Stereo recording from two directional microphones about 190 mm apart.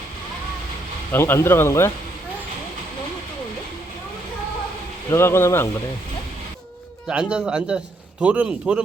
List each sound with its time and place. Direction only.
1.1 s speech: 10° left (ahead or behind)
5.1 s speech: 15° left (ahead or behind)
7.1 s a man's voice: 5° right (ahead or behind)